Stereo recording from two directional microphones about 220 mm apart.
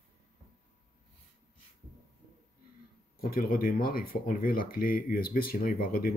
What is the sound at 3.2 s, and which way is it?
Speech, 40° left (ahead or behind).